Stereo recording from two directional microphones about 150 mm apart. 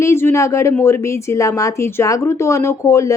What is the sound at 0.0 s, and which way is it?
Speech, 15° left (ahead or behind).